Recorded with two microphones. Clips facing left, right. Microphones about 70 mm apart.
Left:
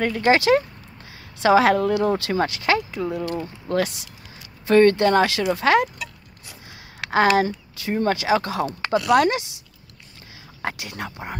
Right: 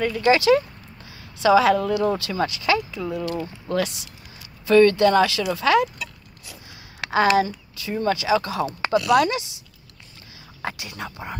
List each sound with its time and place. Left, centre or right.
0.0 s speech: left
10.6 s speech: left